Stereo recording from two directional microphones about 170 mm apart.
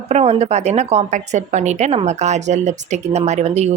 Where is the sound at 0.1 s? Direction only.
40° right (ahead or behind).